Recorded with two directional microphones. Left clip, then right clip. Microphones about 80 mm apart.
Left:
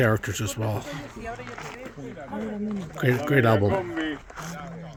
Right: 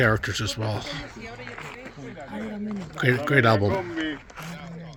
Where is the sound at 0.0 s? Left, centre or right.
Left.